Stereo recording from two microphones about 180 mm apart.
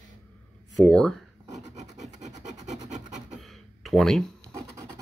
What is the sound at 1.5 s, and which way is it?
Filing, 40° right (ahead or behind).